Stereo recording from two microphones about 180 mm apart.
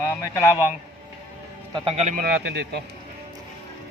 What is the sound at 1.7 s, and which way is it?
Speech, 30° right (ahead or behind).